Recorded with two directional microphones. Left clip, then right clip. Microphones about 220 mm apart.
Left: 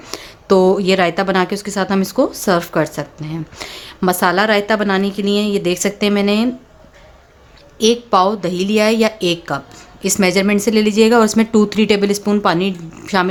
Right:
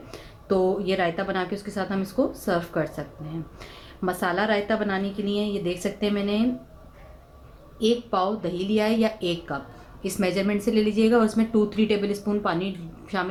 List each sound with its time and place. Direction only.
0.1 s speech: 50° left (ahead or behind)
7.8 s speech: 50° left (ahead or behind)